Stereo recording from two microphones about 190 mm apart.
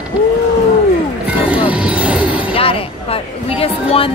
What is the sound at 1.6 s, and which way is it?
Vehicle, 5° right (ahead or behind).